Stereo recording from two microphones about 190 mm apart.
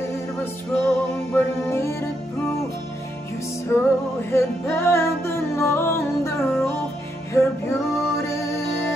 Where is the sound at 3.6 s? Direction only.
15° left (ahead or behind).